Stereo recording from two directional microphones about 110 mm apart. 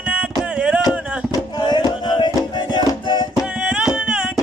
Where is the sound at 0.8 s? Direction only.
35° left (ahead or behind).